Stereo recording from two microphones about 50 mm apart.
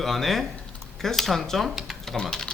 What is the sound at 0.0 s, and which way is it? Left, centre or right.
A man's voice, centre.